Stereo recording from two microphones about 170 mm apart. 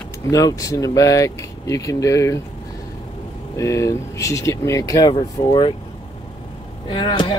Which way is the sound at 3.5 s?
20° left (ahead or behind).